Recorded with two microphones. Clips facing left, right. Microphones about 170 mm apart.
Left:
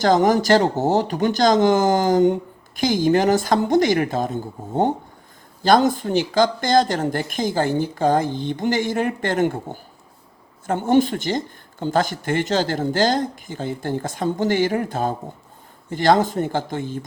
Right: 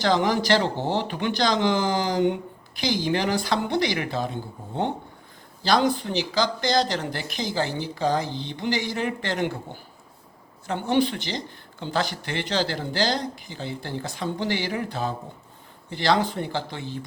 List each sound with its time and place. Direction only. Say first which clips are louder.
0.0 s speech: left 6 dB; 45° left (ahead or behind)